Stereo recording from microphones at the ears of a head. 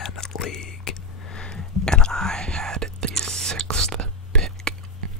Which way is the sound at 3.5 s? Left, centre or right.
Right.